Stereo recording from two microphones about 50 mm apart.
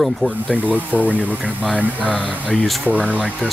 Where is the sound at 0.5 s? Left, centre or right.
Right.